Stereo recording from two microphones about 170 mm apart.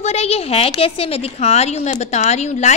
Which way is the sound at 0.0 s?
40° left (ahead or behind).